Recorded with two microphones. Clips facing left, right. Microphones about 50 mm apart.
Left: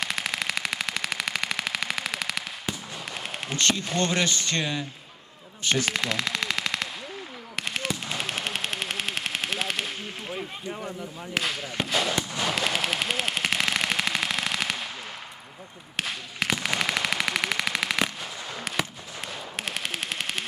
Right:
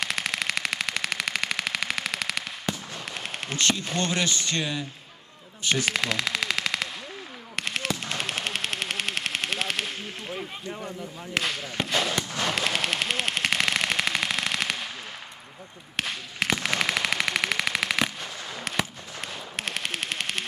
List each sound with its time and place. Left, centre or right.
0.0 s a sound: centre
2.7 s fireworks: centre
3.1 s speech: centre
7.5 s fireworks: centre
7.9 s machine gun: centre
12.1 s fireworks: centre
12.5 s machine gun: centre
16.0 s a sound: centre
19.3 s machine gun: centre